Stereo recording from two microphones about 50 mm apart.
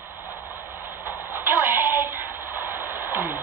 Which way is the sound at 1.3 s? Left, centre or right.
Right.